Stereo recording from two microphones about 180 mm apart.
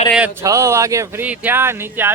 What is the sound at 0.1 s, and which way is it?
Speech, 5° right (ahead or behind).